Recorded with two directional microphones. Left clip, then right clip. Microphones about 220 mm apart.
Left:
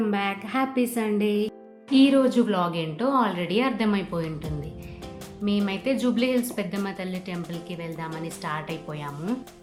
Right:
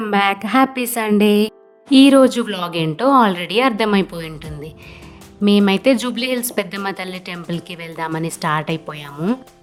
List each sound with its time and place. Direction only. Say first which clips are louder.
0.0 s a woman's voice: right 10 dB; 50° right (ahead or behind)
5.5 s a woman's voice: right 12 dB; 50° right (ahead or behind)